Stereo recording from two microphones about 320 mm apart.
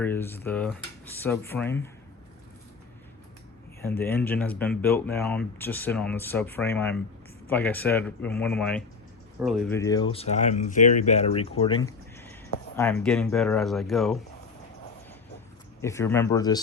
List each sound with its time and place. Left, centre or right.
0.0 s speech: centre
3.8 s speech: centre
15.8 s speech: centre